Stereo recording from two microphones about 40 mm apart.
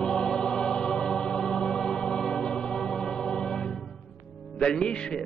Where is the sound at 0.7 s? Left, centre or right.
Centre.